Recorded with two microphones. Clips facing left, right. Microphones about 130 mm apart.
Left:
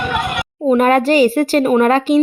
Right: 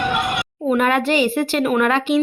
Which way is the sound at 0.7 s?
40° left (ahead or behind).